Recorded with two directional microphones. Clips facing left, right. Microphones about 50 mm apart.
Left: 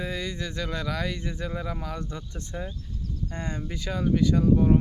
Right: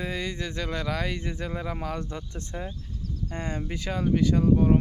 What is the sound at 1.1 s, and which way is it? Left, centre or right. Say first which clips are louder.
Speech: even; centre.